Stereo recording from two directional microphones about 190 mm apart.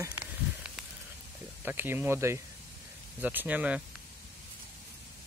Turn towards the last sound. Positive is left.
turn(degrees=-5)  # may be behind; listen again after turning